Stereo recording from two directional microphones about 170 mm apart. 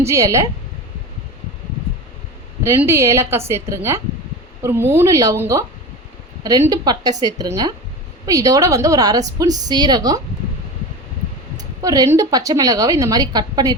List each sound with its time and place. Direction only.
0.0 s a woman's voice: 15° right (ahead or behind)
2.6 s a woman's voice: 15° right (ahead or behind)
11.8 s a woman's voice: 20° right (ahead or behind)